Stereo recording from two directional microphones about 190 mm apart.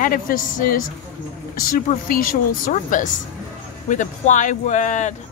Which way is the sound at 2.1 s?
45° left (ahead or behind).